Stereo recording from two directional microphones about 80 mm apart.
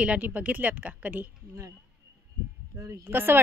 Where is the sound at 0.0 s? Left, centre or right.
Centre.